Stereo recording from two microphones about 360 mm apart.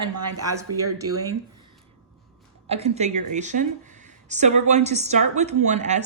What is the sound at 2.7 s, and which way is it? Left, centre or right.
A woman's voice, centre.